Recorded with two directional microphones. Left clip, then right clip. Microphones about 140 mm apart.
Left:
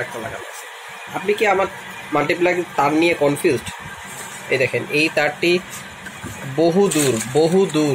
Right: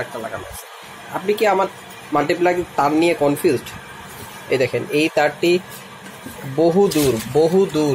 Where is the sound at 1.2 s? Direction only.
5° right (ahead or behind).